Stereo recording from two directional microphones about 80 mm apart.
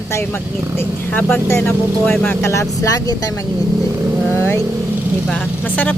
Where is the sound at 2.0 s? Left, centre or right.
Centre.